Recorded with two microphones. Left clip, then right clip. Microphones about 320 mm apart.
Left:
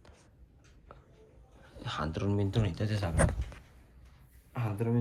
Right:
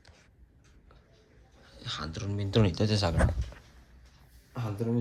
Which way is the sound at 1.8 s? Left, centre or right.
Centre.